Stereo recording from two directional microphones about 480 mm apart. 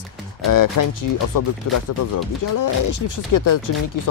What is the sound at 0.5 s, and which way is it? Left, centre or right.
Speech, left.